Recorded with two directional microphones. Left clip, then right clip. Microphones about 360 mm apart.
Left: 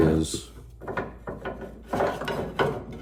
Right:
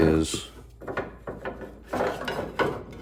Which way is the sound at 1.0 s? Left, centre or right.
Centre.